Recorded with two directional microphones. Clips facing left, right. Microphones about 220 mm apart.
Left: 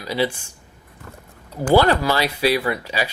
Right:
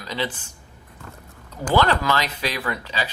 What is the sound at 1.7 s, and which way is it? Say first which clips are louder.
Speech: left 4 dB; 10° left (ahead or behind).